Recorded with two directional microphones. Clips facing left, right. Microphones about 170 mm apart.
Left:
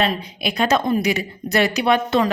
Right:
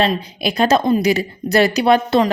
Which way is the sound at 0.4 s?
35° right (ahead or behind).